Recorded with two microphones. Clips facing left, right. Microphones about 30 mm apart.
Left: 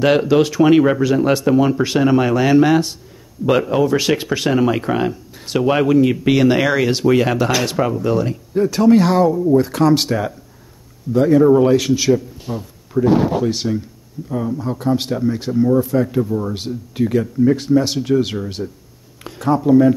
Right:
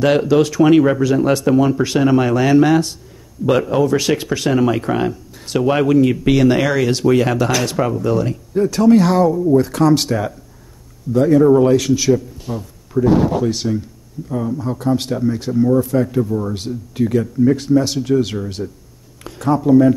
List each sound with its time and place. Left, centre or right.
0.0 s speech: centre